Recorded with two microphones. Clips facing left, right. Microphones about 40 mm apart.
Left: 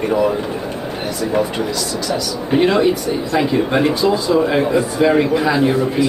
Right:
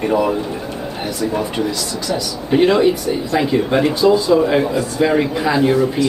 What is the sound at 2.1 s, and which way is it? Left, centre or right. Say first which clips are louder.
A man's voice: right 2 dB; centre.